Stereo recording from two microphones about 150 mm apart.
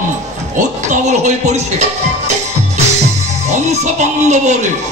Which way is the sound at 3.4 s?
50° right (ahead or behind).